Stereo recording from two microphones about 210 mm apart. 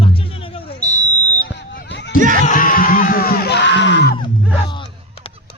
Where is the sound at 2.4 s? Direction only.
40° left (ahead or behind).